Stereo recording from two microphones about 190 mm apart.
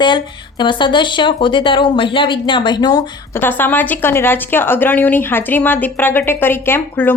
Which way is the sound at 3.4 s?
10° left (ahead or behind).